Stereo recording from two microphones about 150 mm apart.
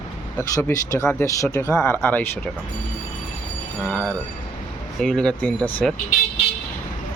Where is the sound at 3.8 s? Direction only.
10° left (ahead or behind).